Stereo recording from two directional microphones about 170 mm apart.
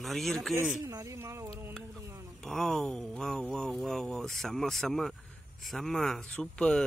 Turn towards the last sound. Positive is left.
turn(degrees=5)  # may be behind; listen again after turning